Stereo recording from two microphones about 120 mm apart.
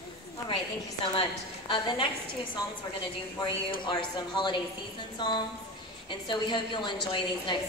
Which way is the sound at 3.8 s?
40° left (ahead or behind).